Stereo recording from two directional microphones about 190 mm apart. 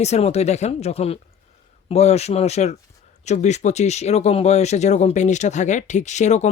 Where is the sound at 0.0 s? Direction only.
35° left (ahead or behind).